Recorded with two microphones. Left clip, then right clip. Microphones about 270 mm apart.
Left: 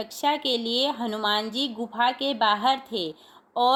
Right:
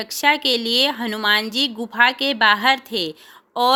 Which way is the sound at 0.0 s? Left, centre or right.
Right.